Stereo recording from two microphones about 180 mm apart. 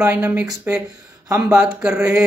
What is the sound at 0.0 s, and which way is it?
Speech, 10° right (ahead or behind).